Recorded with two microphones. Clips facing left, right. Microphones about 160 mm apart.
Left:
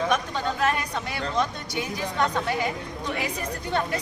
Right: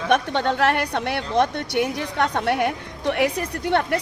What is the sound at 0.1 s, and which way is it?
Speech, 70° right (ahead or behind).